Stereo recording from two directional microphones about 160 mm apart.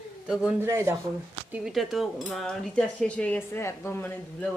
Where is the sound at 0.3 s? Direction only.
10° right (ahead or behind).